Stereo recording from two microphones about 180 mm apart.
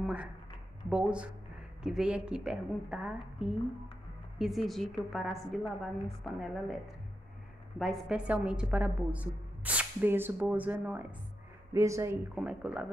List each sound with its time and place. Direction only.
0.0 s a sound: 5° right (ahead or behind)
0.8 s a woman's voice: 5° right (ahead or behind)
4.4 s a woman's voice: centre (ahead or behind)
7.8 s a woman's voice: centre (ahead or behind); by 12.2 s 15° right (ahead or behind)
12.4 s a woman's voice: 5° right (ahead or behind)